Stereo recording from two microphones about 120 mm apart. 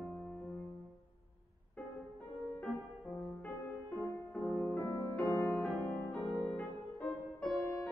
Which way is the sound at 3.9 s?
20° left (ahead or behind).